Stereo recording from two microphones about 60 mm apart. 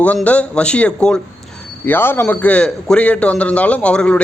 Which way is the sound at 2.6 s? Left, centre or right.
Centre.